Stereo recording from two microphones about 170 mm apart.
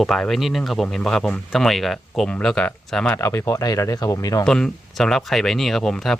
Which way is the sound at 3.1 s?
15° left (ahead or behind).